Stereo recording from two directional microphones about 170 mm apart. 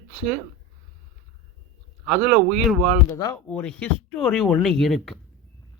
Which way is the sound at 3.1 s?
20° left (ahead or behind).